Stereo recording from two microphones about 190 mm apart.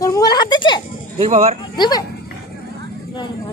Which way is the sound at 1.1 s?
35° right (ahead or behind).